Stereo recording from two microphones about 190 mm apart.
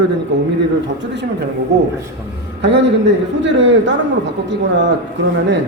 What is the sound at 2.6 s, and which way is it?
A man's voice, 65° right (ahead or behind).